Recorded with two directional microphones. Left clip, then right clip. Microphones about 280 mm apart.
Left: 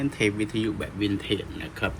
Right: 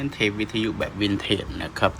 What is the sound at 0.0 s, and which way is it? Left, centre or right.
Speech, centre.